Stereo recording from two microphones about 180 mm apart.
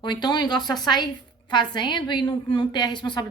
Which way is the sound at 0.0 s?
25° left (ahead or behind).